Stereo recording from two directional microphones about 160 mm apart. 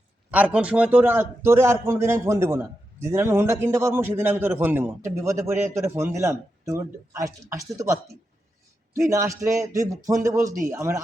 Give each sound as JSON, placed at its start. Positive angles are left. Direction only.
{"t": 0.3, "sound": "a man's voice", "side_deg": -10}